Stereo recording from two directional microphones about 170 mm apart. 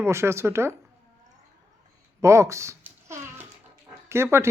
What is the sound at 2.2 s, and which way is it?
Babbling, 15° right (ahead or behind).